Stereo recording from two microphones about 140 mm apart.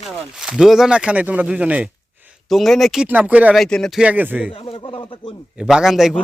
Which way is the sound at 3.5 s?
5° left (ahead or behind).